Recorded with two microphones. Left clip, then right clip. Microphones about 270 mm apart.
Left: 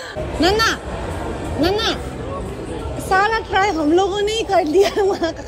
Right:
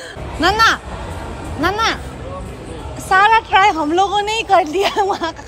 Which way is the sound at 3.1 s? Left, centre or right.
Centre.